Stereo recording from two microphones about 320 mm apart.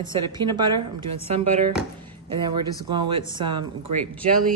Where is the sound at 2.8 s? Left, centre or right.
Centre.